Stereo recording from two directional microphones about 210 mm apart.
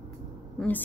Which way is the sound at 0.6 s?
10° left (ahead or behind).